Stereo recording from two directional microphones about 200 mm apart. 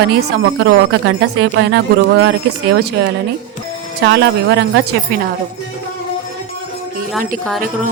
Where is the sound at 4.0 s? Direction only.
60° right (ahead or behind).